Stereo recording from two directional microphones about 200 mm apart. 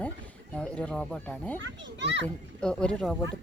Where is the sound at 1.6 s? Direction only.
60° right (ahead or behind).